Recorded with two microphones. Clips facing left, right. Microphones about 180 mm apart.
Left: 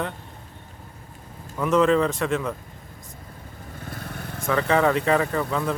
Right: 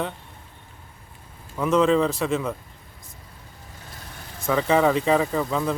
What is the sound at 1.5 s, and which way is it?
Speech, centre (ahead or behind).